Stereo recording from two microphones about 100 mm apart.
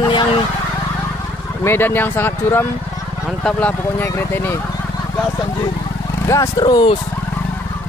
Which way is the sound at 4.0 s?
20° left (ahead or behind).